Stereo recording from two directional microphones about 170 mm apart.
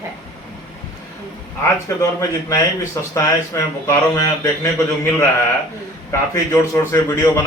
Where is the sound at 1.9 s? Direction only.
15° left (ahead or behind).